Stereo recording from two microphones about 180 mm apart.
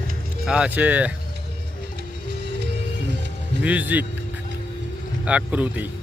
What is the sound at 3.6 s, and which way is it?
Speech, 10° right (ahead or behind).